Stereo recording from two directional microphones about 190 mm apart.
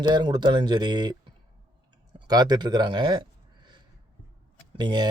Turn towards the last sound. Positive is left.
turn(degrees=-25)  # may be behind; listen again after turning